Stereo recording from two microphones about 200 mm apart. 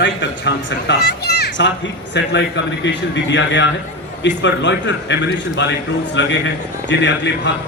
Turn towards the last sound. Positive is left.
turn(degrees=60)  # may be behind; listen again after turning